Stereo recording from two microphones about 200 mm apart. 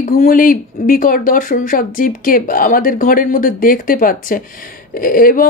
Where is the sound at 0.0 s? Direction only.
40° left (ahead or behind).